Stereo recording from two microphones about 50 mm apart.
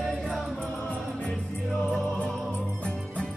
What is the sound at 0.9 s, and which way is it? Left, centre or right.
Music, left.